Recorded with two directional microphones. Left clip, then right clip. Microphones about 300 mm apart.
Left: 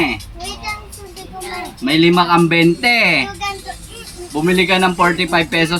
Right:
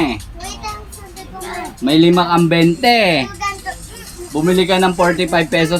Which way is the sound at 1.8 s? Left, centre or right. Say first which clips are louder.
Right 1 dB; centre.